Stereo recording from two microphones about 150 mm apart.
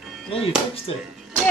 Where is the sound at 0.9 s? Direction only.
35° left (ahead or behind).